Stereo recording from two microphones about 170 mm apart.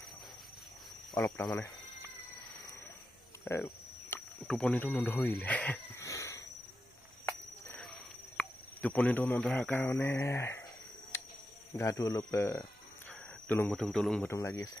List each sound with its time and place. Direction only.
1.1 s speech: 10° left (ahead or behind)
4.1 s speech: 5° left (ahead or behind)
8.4 s speech: 10° left (ahead or behind)
11.1 s cricket: 15° left (ahead or behind)
11.8 s speech: 20° left (ahead or behind); by 14.3 s 5° left (ahead or behind)
14.3 s speech: 20° left (ahead or behind)